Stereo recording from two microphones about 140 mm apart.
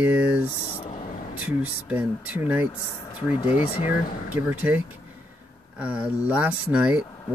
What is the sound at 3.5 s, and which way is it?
Speech, 45° left (ahead or behind).